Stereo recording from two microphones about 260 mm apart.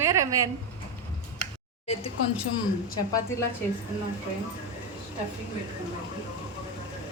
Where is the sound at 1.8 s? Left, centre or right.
Left.